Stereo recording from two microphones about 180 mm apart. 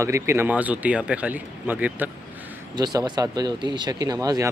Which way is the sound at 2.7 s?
20° right (ahead or behind).